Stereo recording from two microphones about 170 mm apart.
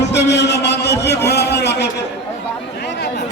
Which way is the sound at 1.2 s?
75° left (ahead or behind).